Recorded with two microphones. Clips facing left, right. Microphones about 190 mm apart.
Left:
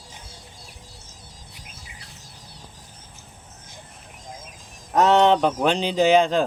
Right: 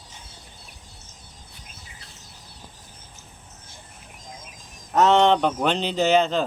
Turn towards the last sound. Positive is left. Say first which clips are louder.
# left 3 dB
turn(degrees=10)  # may be behind; listen again after turning